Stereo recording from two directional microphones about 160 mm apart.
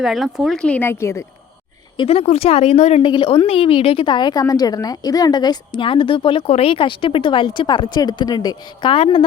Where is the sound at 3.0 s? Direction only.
30° left (ahead or behind).